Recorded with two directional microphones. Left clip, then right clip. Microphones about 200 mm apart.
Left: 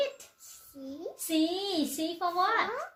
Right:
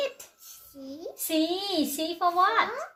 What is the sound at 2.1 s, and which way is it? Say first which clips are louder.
Speech: right 6 dB; 25° right (ahead or behind).